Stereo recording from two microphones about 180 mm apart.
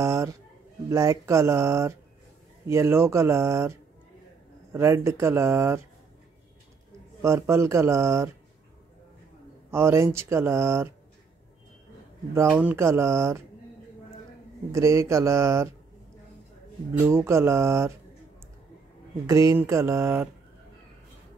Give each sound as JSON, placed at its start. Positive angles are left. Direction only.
{"t": 0.0, "sound": "bird", "side_deg": -15}
{"t": 0.8, "sound": "speech", "side_deg": -15}
{"t": 4.7, "sound": "speech", "side_deg": -15}
{"t": 7.2, "sound": "speech", "side_deg": -15}
{"t": 9.7, "sound": "speech", "side_deg": -15}
{"t": 12.4, "sound": "speech", "side_deg": -10}
{"t": 14.7, "sound": "speech", "side_deg": -15}
{"t": 17.0, "sound": "speech", "side_deg": -15}
{"t": 19.2, "sound": "speech", "side_deg": -15}